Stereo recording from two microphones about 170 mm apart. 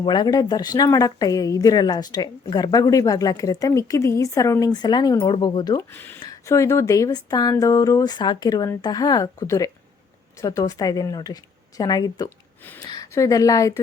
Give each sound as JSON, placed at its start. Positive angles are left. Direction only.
{"t": 0.0, "sound": "speech", "side_deg": 25}
{"t": 5.9, "sound": "speech", "side_deg": 10}